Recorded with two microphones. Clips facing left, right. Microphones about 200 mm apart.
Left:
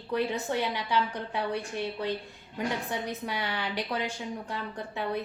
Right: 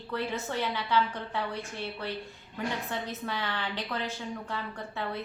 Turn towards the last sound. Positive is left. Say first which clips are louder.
# left 3 dB
turn(degrees=15)  # may be behind; listen again after turning